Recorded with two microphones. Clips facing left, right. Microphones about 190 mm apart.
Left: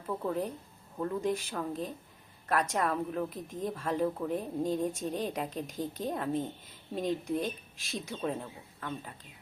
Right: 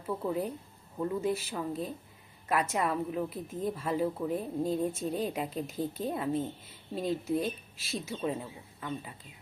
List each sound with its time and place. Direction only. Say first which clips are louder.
0.2 s a woman's voice: right 1 dB; 10° right (ahead or behind)